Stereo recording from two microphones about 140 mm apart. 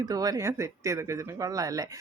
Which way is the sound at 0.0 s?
25° right (ahead or behind).